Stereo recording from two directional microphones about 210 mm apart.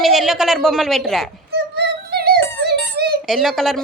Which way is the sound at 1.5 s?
50° right (ahead or behind).